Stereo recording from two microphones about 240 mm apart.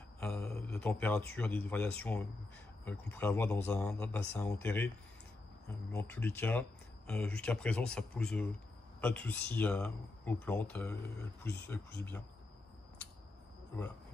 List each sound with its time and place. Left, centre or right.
0.2 s speech: centre